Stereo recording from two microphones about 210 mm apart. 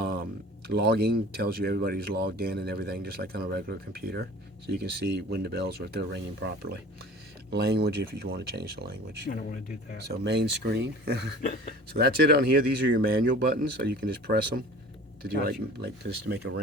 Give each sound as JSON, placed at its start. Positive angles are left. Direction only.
{"t": 0.7, "sound": "speech", "side_deg": -50}
{"t": 9.3, "sound": "speech", "side_deg": 40}
{"t": 10.1, "sound": "speech", "side_deg": -50}
{"t": 11.4, "sound": "speech", "side_deg": 40}
{"t": 11.9, "sound": "speech", "side_deg": -50}